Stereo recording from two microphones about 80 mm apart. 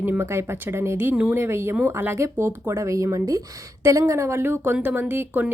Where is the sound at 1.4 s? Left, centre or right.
Right.